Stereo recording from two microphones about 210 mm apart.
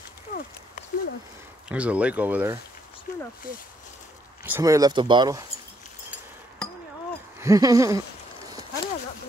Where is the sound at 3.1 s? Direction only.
45° left (ahead or behind).